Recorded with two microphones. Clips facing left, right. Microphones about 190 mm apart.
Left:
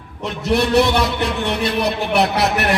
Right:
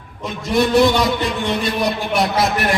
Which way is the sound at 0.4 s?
65° left (ahead or behind).